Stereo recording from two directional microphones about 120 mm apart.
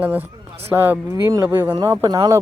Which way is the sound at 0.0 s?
15° right (ahead or behind).